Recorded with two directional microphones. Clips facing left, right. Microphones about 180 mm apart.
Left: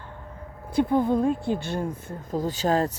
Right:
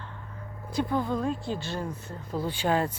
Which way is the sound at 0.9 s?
20° left (ahead or behind).